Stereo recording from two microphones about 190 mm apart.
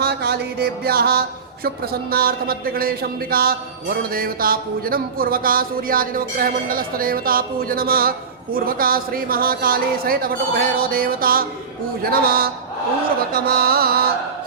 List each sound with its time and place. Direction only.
0.0 s music: 55° right (ahead or behind)
1.6 s speech: 55° right (ahead or behind)